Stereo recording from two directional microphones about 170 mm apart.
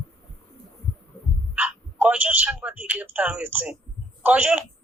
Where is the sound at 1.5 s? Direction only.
5° right (ahead or behind).